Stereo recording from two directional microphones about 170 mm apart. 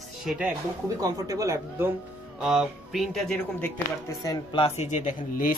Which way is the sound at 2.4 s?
Centre (ahead or behind).